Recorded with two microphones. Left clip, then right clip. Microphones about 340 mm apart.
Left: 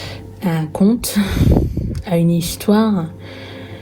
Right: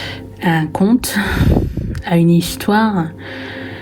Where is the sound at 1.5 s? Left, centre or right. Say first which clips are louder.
Even; left.